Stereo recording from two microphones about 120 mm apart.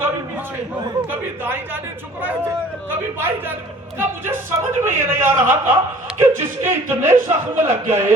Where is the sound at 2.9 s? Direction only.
15° right (ahead or behind).